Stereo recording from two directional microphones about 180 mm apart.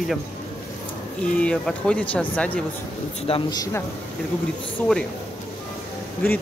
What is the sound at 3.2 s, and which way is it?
Speech, 25° left (ahead or behind).